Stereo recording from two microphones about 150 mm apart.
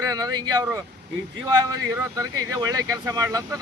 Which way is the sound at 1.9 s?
20° right (ahead or behind).